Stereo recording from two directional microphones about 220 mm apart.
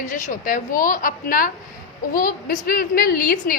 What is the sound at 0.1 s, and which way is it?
A woman's voice, 35° left (ahead or behind).